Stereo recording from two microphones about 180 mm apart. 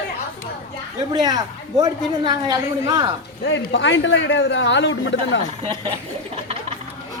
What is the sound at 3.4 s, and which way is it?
A man's voice, 90° left.